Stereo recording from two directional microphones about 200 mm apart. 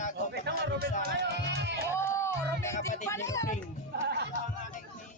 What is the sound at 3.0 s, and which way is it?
Speech, 15° left (ahead or behind).